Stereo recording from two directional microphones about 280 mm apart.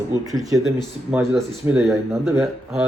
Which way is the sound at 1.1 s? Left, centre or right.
Centre.